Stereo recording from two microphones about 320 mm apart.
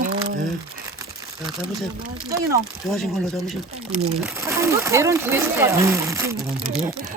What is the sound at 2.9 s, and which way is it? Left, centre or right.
Speech, centre.